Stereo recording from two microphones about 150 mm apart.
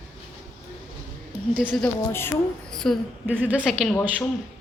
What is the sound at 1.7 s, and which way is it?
A woman's voice, 5° left (ahead or behind).